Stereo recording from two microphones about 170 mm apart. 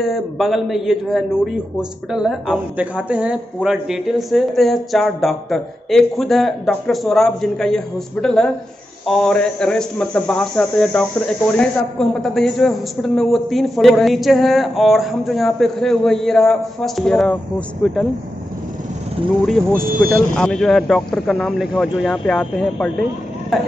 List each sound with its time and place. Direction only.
0.0 s speech: centre (ahead or behind)
19.4 s speech: centre (ahead or behind)
19.9 s speech: 60° right (ahead or behind)
20.3 s speech: 5° left (ahead or behind)